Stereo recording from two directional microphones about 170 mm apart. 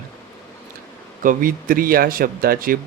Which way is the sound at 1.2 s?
55° right (ahead or behind).